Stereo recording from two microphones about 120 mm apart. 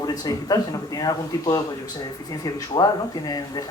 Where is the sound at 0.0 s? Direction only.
30° left (ahead or behind).